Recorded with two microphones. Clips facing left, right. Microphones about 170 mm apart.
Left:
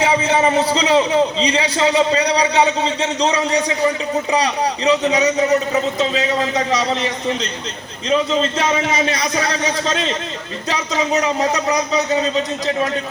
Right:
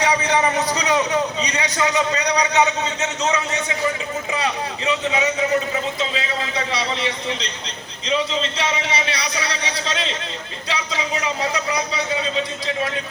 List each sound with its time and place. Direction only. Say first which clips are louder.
0.0 s a man's voice: left 3 dB; 25° left (ahead or behind); by 12.9 s 45° left (ahead or behind)